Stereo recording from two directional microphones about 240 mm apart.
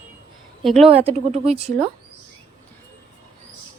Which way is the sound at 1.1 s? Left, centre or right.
Right.